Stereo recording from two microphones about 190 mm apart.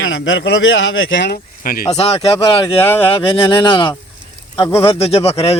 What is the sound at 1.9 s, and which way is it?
Speech, 30° left (ahead or behind).